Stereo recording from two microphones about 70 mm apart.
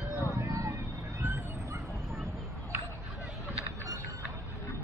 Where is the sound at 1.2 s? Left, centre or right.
Right.